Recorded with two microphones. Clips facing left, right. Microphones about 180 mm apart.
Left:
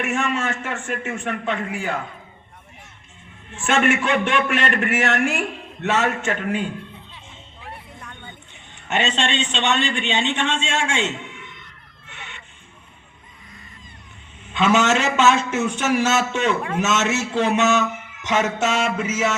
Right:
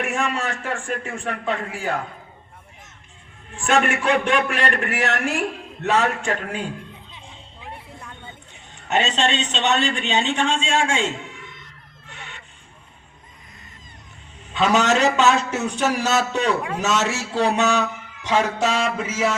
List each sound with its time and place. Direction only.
0.0 s a man's voice: 35° right (ahead or behind)
3.5 s a man's voice: 35° right (ahead or behind)
8.9 s a man's voice: 35° right (ahead or behind)
12.0 s goose: 35° right (ahead or behind)
14.4 s a man's voice: 35° right (ahead or behind)